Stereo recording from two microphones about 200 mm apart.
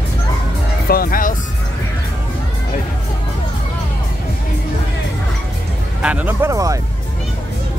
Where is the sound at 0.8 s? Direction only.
45° left (ahead or behind).